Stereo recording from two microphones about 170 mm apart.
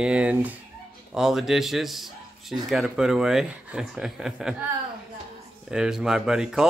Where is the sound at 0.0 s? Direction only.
5° right (ahead or behind).